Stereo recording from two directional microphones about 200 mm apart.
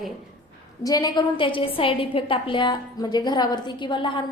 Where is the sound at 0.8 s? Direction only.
20° left (ahead or behind).